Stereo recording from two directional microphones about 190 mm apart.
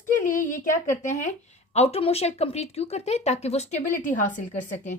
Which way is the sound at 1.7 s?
30° left (ahead or behind).